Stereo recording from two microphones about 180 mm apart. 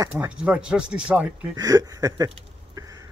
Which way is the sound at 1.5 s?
20° right (ahead or behind).